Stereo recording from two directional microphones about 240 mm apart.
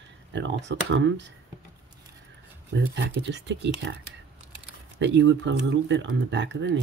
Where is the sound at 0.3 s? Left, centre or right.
Right.